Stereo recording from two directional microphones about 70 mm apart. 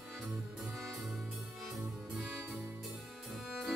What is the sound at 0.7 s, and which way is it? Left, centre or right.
Music, centre.